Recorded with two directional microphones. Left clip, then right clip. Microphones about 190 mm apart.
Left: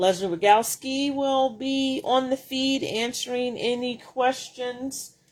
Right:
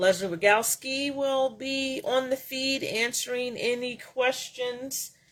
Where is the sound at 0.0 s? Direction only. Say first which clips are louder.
Left 1 dB; 10° left (ahead or behind).